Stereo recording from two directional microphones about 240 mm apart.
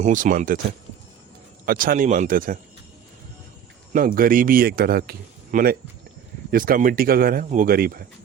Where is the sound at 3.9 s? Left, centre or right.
Right.